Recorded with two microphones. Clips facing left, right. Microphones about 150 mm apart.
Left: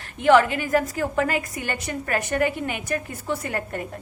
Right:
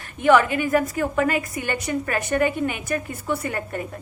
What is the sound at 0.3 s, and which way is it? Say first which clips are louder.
A woman's voice: even; 40° left (ahead or behind).